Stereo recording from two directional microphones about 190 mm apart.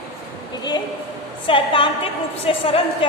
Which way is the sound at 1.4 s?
25° left (ahead or behind).